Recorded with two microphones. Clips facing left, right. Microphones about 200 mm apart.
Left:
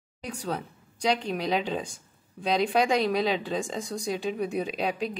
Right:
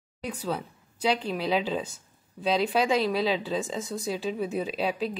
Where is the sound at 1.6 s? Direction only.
Centre (ahead or behind).